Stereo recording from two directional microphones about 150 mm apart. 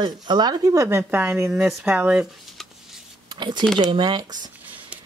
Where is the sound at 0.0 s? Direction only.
30° right (ahead or behind).